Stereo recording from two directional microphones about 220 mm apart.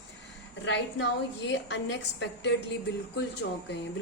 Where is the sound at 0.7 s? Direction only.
50° left (ahead or behind).